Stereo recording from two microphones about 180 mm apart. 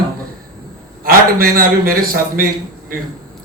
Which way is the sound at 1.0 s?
55° right (ahead or behind).